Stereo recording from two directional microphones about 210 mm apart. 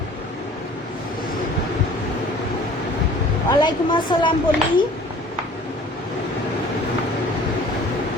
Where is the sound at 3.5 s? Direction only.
20° left (ahead or behind).